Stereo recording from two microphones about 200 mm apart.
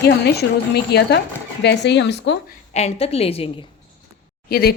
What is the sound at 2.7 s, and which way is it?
Speech, 35° left (ahead or behind).